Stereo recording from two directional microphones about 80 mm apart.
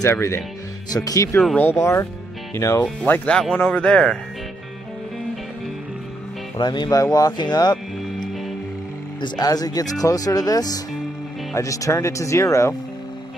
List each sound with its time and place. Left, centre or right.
0.1 s speech: left
0.9 s speech: left
1.6 s speech: left
3.1 s speech: left
3.5 s speech: centre
6.6 s speech: left
7.0 s speech: left
9.4 s speech: left